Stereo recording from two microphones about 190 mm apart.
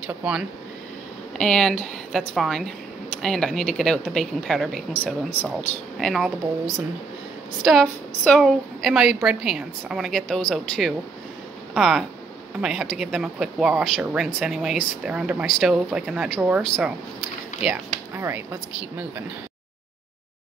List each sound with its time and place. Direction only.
0.0 s speech: 5° right (ahead or behind)